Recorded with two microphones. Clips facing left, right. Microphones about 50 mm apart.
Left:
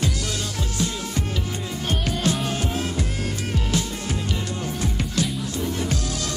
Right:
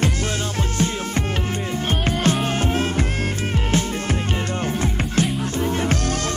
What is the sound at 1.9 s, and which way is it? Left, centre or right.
Music, right.